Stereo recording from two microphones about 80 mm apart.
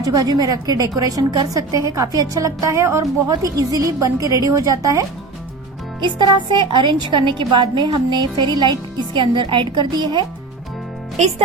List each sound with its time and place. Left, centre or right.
0.0 s a woman's voice: right
6.0 s speech: right
7.9 s a woman's voice: right